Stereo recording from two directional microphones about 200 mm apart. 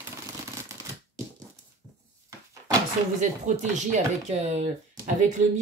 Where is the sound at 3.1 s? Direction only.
35° right (ahead or behind).